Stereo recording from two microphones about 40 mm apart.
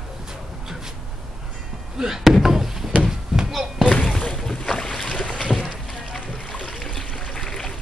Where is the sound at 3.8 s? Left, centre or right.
Left.